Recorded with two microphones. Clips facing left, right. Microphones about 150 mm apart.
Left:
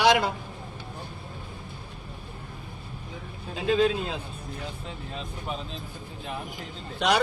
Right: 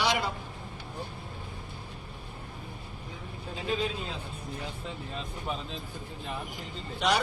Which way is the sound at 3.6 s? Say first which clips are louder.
Left 9 dB; 90° left.